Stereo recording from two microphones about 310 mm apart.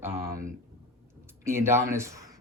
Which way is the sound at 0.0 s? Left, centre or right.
Centre.